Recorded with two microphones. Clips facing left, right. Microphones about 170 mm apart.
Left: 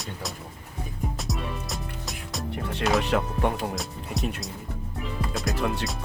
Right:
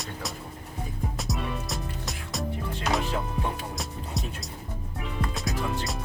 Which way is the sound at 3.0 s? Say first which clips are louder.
Left 5 dB; 70° left (ahead or behind).